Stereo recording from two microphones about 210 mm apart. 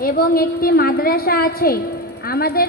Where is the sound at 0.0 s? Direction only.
45° left (ahead or behind).